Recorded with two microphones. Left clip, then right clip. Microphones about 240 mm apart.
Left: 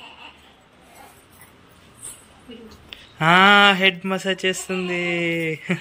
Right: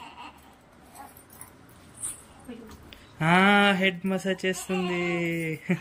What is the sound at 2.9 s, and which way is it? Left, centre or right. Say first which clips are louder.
Speech: left 7 dB; centre.